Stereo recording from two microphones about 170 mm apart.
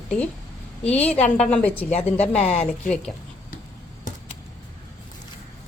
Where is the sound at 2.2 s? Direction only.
10° left (ahead or behind).